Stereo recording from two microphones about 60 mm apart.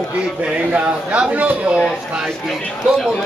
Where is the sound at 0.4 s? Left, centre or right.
Centre.